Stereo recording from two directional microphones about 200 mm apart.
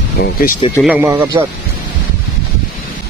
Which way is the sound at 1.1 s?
20° right (ahead or behind).